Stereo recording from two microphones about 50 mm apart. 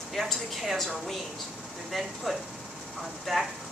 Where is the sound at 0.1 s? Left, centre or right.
Centre.